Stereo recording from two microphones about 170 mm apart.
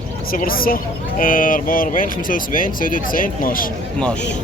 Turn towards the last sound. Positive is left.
turn(degrees=55)  # may be behind; listen again after turning